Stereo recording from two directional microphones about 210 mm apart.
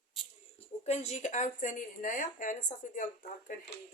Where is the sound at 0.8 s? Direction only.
30° left (ahead or behind).